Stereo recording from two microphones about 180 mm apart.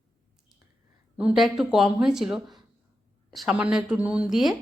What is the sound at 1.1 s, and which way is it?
A woman's voice, 5° right (ahead or behind).